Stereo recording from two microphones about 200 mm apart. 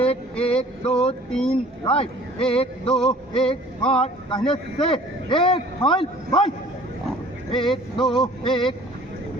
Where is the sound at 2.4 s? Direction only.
30° left (ahead or behind).